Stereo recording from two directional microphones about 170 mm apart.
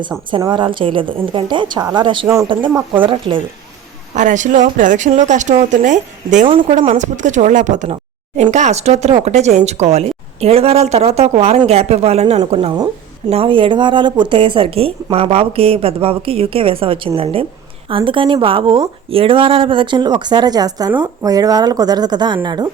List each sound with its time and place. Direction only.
0.5 s a woman's voice: 30° right (ahead or behind)
2.2 s speech: 15° right (ahead or behind)
2.5 s a woman's voice: 30° right (ahead or behind)
4.1 s speech: 45° right (ahead or behind)
6.5 s a woman's voice: 35° right (ahead or behind)